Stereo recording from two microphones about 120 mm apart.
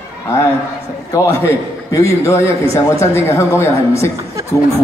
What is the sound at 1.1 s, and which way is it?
A man's voice, 25° left (ahead or behind).